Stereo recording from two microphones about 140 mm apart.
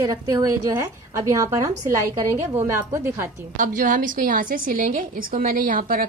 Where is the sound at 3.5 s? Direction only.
70° right (ahead or behind).